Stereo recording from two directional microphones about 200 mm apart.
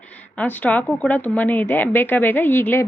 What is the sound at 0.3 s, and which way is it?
Speech, 10° left (ahead or behind).